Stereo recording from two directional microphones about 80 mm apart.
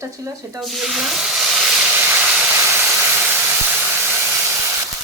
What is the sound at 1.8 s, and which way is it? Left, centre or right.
Steam, right.